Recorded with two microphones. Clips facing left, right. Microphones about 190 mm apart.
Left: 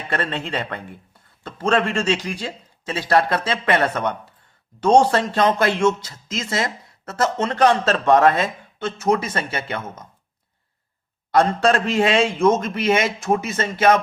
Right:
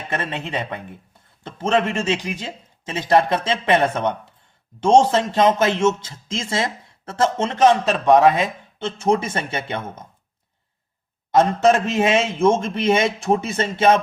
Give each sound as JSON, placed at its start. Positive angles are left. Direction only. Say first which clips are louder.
{"t": 0.1, "sound": "a man's voice", "louder": "left 1 dB", "side_deg": -20}
{"t": 8.8, "sound": "a man's voice", "louder": "right 1 dB", "side_deg": -30}
{"t": 11.3, "sound": "a man's voice", "louder": "right 2 dB", "side_deg": -20}